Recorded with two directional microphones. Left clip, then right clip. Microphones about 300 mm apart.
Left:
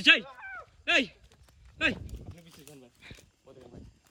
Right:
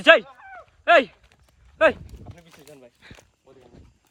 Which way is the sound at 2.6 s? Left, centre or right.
Centre.